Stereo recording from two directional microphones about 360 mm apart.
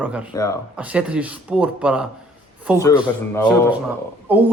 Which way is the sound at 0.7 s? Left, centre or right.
Centre.